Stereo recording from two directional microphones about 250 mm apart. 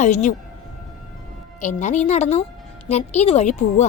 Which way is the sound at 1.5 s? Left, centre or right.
Left.